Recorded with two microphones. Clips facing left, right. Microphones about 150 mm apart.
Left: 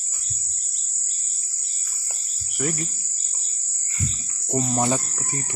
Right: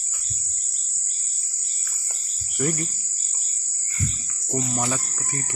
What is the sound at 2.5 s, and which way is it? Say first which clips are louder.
Cricket: right 2 dB; centre (ahead or behind).